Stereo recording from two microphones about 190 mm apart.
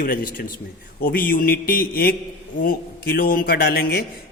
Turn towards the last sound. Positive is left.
turn(degrees=55)  # may be behind; listen again after turning